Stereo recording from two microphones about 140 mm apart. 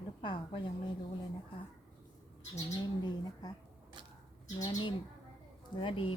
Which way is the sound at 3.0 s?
30° left (ahead or behind).